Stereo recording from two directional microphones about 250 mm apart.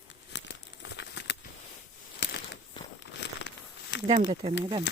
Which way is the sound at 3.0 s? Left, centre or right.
Left.